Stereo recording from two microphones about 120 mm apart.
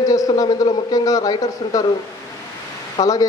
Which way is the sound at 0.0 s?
30° left (ahead or behind).